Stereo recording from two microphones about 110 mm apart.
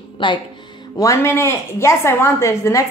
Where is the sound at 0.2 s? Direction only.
50° left (ahead or behind).